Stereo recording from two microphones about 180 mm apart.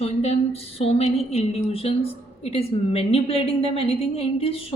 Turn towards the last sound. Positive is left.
turn(degrees=30)  # may be behind; listen again after turning